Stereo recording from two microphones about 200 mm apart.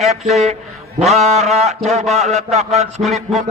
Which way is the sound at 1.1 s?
35° right (ahead or behind).